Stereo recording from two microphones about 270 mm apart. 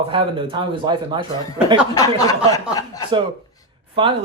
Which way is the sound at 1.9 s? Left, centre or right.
Centre.